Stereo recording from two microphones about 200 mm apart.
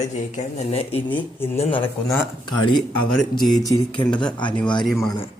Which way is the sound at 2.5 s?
25° left (ahead or behind).